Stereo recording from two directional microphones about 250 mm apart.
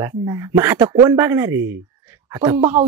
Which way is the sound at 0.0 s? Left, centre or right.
Centre.